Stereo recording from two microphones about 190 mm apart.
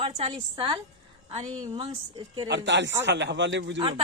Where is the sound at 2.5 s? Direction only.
70° right (ahead or behind).